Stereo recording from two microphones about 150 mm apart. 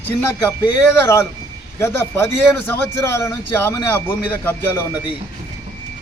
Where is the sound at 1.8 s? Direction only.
20° left (ahead or behind).